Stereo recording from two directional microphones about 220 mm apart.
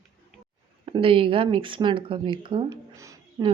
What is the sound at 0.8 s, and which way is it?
Speech, 25° right (ahead or behind).